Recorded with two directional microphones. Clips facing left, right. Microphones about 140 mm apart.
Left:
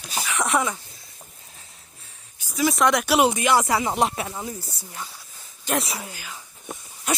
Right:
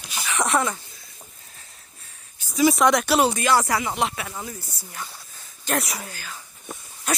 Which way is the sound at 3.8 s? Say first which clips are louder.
Left 3 dB; 40° left (ahead or behind).